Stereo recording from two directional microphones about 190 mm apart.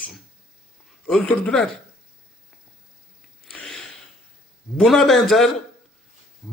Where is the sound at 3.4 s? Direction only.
5° left (ahead or behind).